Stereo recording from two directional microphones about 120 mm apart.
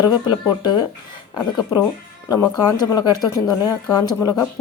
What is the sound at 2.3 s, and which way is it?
Speech, 35° left (ahead or behind).